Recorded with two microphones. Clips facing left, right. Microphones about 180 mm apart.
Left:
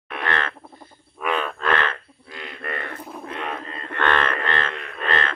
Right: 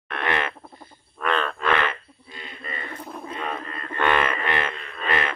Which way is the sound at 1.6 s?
5° right (ahead or behind).